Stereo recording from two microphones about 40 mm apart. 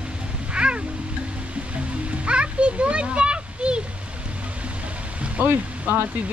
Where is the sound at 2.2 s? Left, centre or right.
Right.